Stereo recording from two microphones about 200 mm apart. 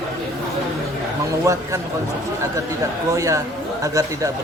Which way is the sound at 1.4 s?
15° right (ahead or behind).